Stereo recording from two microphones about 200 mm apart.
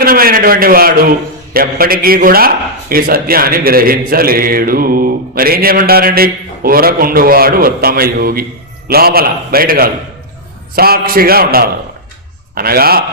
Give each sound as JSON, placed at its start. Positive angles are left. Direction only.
{"t": 0.0, "sound": "a man's voice", "side_deg": -45}